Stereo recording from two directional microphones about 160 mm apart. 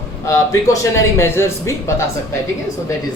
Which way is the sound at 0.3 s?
20° left (ahead or behind).